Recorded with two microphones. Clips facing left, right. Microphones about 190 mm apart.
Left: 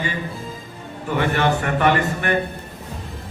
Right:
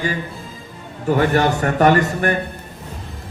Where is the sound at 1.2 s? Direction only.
40° right (ahead or behind).